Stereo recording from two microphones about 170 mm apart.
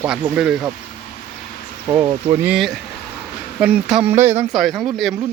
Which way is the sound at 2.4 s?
5° right (ahead or behind).